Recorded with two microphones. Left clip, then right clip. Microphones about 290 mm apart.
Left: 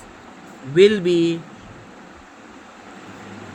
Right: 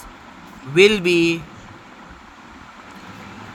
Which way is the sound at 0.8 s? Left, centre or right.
Right.